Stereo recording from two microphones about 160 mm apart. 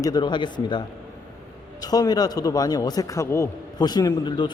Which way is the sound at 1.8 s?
25° left (ahead or behind).